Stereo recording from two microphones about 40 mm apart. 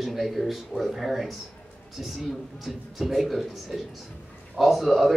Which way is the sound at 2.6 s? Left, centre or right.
Centre.